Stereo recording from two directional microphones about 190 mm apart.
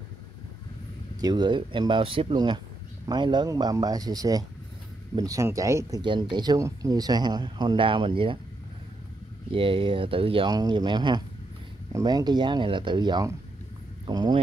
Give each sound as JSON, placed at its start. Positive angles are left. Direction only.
{"t": 1.2, "sound": "speech", "side_deg": -20}
{"t": 9.5, "sound": "speech", "side_deg": -25}